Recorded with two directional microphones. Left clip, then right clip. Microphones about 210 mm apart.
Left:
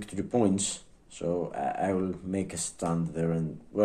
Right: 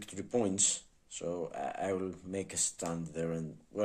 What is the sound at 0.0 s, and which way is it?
Speech, 20° right (ahead or behind).